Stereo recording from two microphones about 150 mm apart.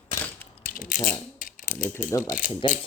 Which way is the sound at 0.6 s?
65° left (ahead or behind).